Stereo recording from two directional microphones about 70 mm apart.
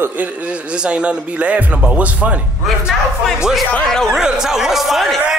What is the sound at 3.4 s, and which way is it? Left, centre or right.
Speech, centre.